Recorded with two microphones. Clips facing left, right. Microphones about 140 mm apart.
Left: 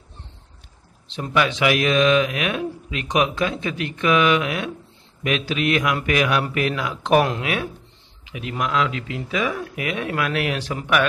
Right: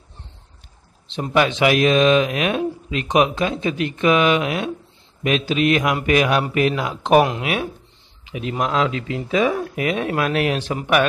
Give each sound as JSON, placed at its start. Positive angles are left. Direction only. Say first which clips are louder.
{"t": 1.0, "sound": "speech", "louder": "right 3 dB", "side_deg": -25}